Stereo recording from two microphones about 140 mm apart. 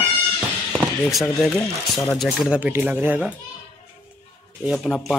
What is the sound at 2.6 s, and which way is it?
Speech, 15° right (ahead or behind).